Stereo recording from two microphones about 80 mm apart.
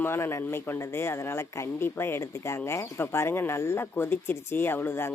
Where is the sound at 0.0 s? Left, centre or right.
Left.